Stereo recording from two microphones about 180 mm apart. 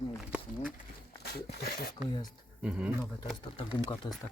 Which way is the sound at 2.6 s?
5° right (ahead or behind).